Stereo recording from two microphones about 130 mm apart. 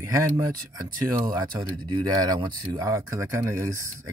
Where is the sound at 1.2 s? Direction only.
35° right (ahead or behind).